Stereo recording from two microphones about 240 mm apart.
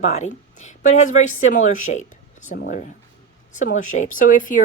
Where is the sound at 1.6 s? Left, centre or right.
Left.